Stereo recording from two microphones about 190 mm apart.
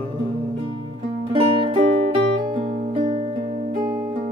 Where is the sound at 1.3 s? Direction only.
25° right (ahead or behind).